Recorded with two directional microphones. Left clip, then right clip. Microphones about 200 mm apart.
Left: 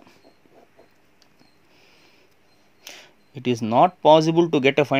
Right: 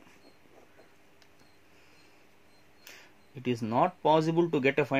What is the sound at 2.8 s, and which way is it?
Speech, 35° left (ahead or behind).